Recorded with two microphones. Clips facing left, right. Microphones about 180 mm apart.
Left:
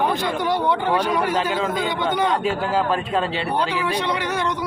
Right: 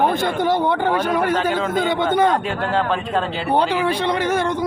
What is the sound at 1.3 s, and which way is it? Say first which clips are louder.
Speech: right 2 dB; 5° left (ahead or behind).